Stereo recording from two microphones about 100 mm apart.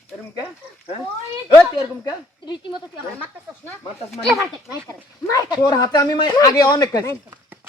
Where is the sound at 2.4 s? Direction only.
50° left (ahead or behind).